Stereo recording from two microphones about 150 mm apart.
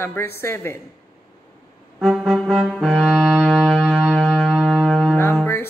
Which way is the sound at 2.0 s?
Centre (ahead or behind).